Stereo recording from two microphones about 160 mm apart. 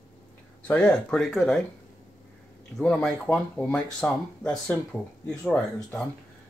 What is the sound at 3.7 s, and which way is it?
Speech, 5° left (ahead or behind).